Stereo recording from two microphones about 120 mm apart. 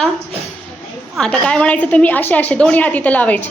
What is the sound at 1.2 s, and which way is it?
A woman's voice, 10° left (ahead or behind).